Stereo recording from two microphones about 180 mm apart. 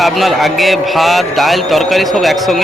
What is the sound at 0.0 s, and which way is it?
A man's voice, centre (ahead or behind).